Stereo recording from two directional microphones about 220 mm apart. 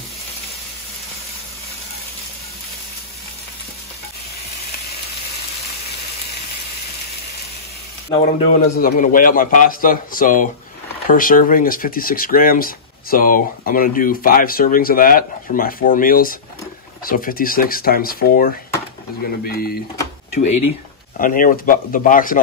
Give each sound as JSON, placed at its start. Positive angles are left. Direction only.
{"t": 8.2, "sound": "speech", "side_deg": 35}
{"t": 21.2, "sound": "speech", "side_deg": 40}